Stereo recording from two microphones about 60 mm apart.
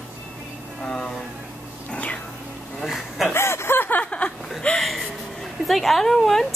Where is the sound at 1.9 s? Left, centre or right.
Left.